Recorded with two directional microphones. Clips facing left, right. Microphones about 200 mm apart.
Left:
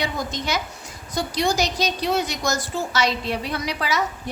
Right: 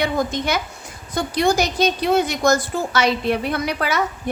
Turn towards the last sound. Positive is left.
turn(degrees=-55)  # may be behind; listen again after turning